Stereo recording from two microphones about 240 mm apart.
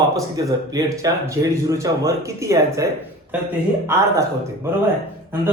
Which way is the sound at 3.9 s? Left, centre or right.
Centre.